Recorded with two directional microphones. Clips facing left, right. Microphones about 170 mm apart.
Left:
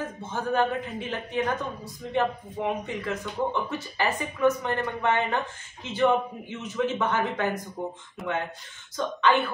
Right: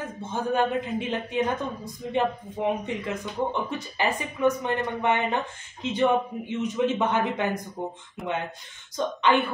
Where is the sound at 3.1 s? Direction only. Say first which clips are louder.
Left 1 dB; 15° right (ahead or behind).